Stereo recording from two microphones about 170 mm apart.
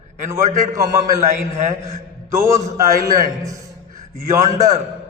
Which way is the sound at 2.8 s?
20° right (ahead or behind).